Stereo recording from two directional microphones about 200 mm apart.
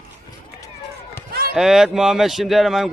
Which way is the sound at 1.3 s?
50° right (ahead or behind).